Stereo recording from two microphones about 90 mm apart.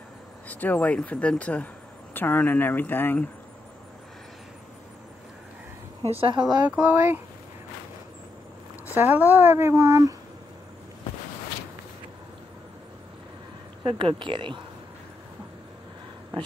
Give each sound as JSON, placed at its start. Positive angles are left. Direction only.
{"t": 0.5, "sound": "speech", "side_deg": 20}
{"t": 6.1, "sound": "speech", "side_deg": -85}
{"t": 6.4, "sound": "a woman's voice", "side_deg": -15}
{"t": 8.9, "sound": "a woman's voice", "side_deg": -20}
{"t": 13.8, "sound": "speech", "side_deg": -75}